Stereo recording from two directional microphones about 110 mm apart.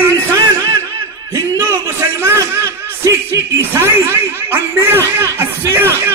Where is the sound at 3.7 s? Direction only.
20° right (ahead or behind).